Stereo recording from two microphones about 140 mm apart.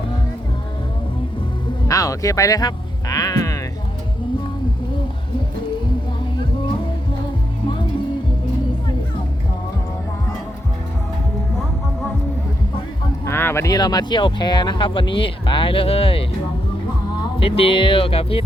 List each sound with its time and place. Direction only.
1.9 s music: 25° left (ahead or behind)
13.2 s speech: 15° left (ahead or behind); by 16.2 s 40° left (ahead or behind)
17.4 s speech: 45° left (ahead or behind)